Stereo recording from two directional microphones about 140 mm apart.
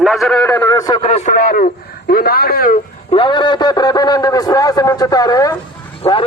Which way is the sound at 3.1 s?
35° left (ahead or behind).